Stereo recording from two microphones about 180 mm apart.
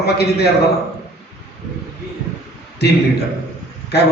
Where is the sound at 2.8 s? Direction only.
65° left (ahead or behind).